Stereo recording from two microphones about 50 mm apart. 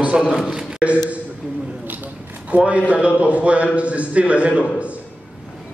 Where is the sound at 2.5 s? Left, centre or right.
Right.